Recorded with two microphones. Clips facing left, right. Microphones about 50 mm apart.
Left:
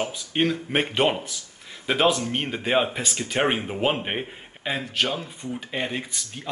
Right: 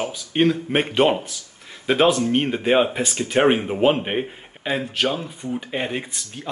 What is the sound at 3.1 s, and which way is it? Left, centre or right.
Speech, right.